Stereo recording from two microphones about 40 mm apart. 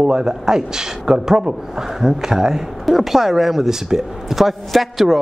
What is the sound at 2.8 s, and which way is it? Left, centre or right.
Speech, centre.